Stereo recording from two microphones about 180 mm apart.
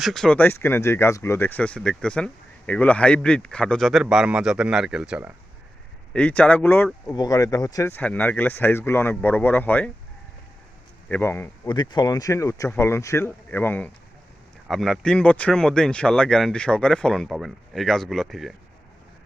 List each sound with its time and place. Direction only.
0.0 s speech: centre (ahead or behind)
6.1 s speech: 5° left (ahead or behind)
11.1 s speech: 10° left (ahead or behind)
11.7 s speech: 25° left (ahead or behind); by 18.5 s centre (ahead or behind)